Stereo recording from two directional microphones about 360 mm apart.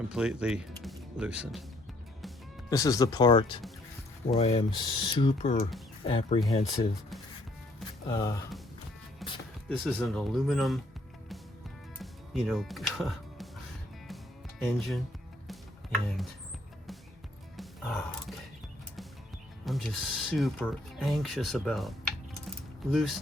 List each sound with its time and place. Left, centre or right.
0.1 s speech: centre
2.2 s speech: centre
8.0 s speech: centre
9.2 s music: centre
9.7 s speech: centre
11.9 s music: centre
14.6 s speech: centre
17.6 s music: centre
19.6 s speech: centre
22.4 s a sound: centre